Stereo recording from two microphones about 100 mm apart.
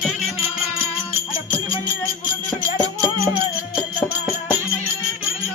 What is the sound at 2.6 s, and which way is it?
Music, 35° right (ahead or behind).